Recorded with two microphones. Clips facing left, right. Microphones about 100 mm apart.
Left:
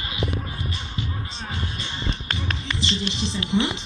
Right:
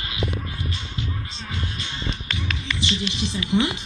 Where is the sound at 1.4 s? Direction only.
35° left (ahead or behind).